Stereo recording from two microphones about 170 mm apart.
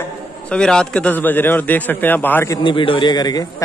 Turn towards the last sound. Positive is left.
turn(degrees=25)  # may be behind; listen again after turning